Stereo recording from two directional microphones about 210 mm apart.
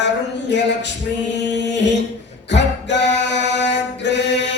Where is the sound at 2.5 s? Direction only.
55° left (ahead or behind).